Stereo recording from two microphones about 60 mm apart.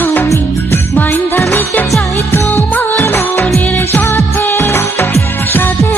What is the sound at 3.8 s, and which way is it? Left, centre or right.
Music, left.